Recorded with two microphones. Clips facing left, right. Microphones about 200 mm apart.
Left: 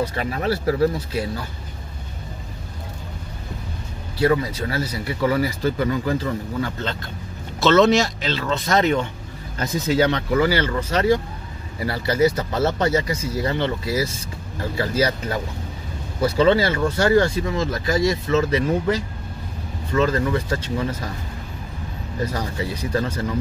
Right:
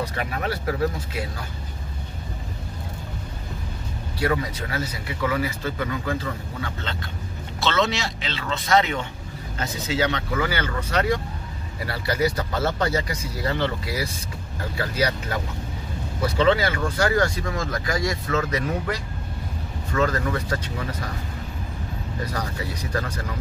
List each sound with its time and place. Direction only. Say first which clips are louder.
0.0 s speech: left 4 dB; 30° left (ahead or behind)
4.2 s speech: left 5 dB; 30° left (ahead or behind)
7.6 s speech: left 9 dB; 45° left (ahead or behind)
9.9 s speech: left 5 dB; 35° left (ahead or behind)
22.3 s speech: left 3 dB; 25° left (ahead or behind)